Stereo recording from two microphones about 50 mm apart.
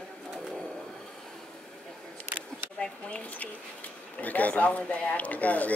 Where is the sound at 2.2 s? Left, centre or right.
Right.